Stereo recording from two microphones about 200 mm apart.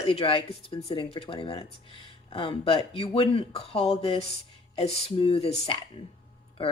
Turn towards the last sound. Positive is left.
turn(degrees=30)  # may be behind; listen again after turning